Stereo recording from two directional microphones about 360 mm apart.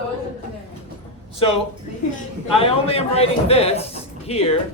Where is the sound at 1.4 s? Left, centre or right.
Centre.